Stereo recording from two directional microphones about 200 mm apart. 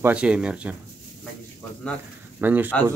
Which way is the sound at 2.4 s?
10° right (ahead or behind).